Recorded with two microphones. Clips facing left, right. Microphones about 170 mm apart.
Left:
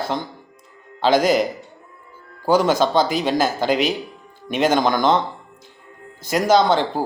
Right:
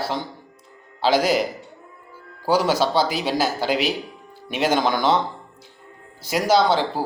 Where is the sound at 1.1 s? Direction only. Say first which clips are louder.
Left 3 dB; 50° left (ahead or behind).